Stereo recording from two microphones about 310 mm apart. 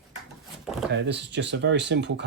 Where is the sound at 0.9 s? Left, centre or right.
Right.